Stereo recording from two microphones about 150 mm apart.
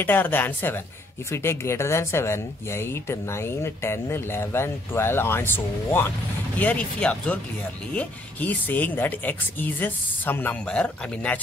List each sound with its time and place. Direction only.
0.0 s speech: 10° left (ahead or behind)